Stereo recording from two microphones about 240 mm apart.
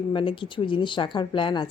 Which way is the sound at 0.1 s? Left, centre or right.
Left.